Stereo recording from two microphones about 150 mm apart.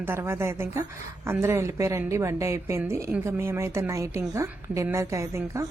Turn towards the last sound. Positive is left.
turn(degrees=-20)  # may be behind; listen again after turning